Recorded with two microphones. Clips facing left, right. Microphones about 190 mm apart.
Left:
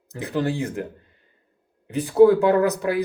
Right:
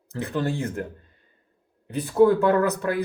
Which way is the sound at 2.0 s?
15° left (ahead or behind).